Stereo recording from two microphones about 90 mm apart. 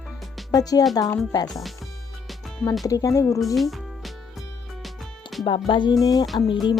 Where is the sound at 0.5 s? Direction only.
45° left (ahead or behind).